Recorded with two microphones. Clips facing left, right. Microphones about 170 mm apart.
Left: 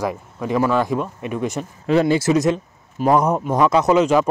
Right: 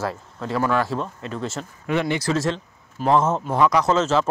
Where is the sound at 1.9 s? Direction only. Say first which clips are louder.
Left 6 dB; 30° left (ahead or behind).